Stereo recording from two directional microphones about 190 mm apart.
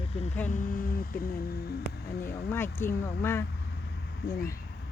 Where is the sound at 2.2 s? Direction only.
10° left (ahead or behind).